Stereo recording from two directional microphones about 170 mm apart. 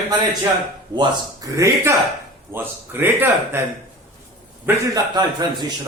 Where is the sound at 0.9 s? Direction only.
25° right (ahead or behind).